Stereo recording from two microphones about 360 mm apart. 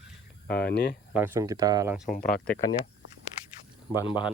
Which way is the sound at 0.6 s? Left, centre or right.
Left.